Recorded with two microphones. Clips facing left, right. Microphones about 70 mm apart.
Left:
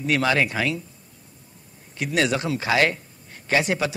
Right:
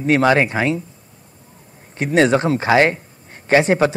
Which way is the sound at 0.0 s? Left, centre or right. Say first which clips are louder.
Right 7 dB; right.